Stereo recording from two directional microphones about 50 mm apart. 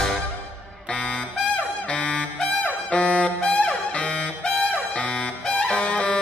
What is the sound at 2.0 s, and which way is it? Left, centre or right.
Music, left.